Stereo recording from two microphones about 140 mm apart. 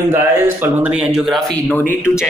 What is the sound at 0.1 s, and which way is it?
Speech, 15° right (ahead or behind).